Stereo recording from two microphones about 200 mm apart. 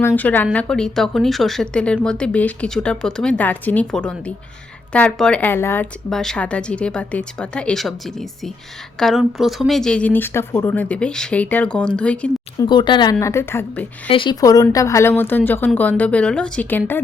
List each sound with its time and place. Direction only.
0.2 s a woman's voice: 10° left (ahead or behind)
12.5 s a woman's voice: 20° left (ahead or behind)
14.1 s a woman's voice: 25° left (ahead or behind)